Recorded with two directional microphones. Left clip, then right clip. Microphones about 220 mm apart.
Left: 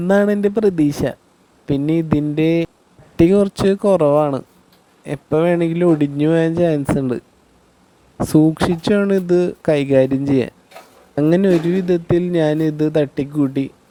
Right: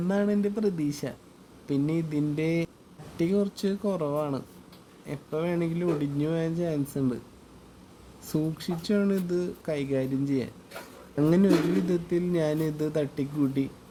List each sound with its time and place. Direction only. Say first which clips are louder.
0.1 s speech: left 13 dB; 45° left (ahead or behind)
8.2 s speech: left 17 dB; 40° left (ahead or behind)